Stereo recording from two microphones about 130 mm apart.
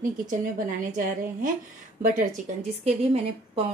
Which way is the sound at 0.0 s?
90° right.